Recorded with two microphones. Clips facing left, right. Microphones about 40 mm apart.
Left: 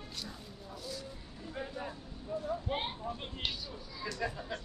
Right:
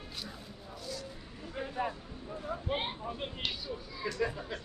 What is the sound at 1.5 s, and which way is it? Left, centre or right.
Vehicle, centre.